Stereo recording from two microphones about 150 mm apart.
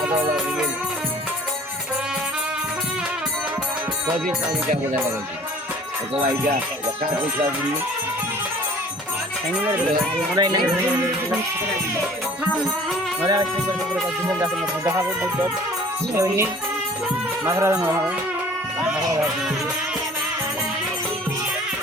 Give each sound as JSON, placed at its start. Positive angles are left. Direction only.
{"t": 0.0, "sound": "music", "side_deg": -15}
{"t": 10.3, "sound": "speech", "side_deg": -25}
{"t": 13.2, "sound": "speech", "side_deg": -25}
{"t": 14.3, "sound": "music", "side_deg": -15}